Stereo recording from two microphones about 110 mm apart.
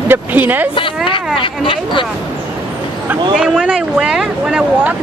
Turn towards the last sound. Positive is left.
turn(degrees=-5)  # may be behind; listen again after turning